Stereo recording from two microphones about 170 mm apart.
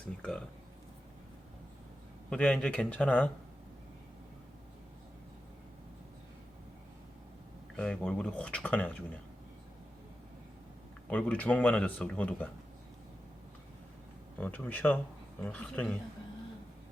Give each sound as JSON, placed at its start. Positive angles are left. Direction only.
{"t": 0.0, "sound": "a sound", "side_deg": 5}
{"t": 2.3, "sound": "speech", "side_deg": 5}
{"t": 7.8, "sound": "speech", "side_deg": 5}
{"t": 11.1, "sound": "speech", "side_deg": 10}
{"t": 14.3, "sound": "speech", "side_deg": 10}